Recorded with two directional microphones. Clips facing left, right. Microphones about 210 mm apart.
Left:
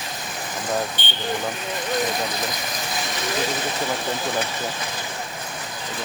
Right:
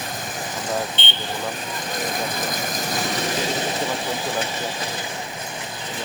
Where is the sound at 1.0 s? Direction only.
25° right (ahead or behind).